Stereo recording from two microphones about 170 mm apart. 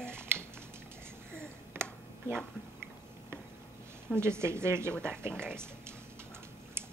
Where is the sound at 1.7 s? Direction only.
15° right (ahead or behind).